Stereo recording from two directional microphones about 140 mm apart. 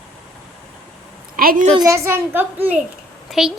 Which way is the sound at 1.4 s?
90° right.